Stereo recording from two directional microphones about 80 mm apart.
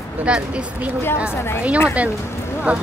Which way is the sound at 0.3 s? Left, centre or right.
Centre.